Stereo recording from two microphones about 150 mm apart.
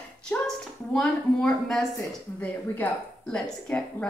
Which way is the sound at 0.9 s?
5° left (ahead or behind).